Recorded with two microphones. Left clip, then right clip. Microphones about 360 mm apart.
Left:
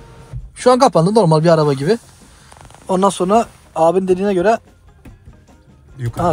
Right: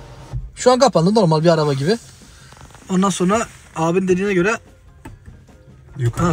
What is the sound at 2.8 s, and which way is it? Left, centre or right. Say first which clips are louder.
Speech: left 4 dB; centre.